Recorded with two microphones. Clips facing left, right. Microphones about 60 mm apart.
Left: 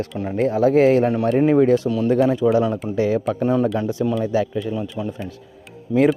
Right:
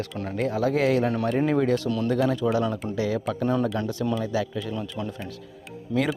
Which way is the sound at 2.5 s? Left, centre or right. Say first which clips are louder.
Left 6 dB; centre.